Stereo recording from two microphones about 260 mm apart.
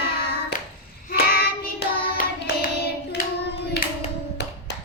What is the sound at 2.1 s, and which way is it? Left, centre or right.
Hands, left.